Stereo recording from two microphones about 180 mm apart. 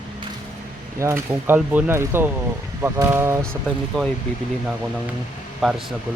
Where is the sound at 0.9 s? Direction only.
15° right (ahead or behind).